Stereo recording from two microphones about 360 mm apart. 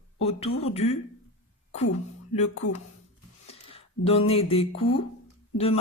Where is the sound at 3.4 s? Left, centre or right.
Centre.